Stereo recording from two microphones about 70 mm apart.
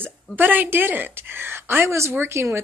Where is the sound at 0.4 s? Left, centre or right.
Right.